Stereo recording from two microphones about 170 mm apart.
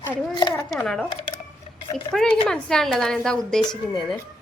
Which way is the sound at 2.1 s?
5° left (ahead or behind).